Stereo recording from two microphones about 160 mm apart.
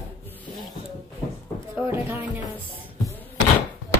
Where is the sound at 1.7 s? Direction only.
15° right (ahead or behind).